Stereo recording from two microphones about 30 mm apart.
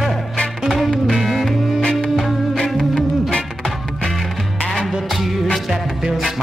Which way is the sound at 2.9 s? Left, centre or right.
Left.